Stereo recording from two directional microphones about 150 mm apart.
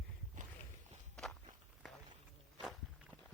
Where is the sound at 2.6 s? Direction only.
Centre (ahead or behind).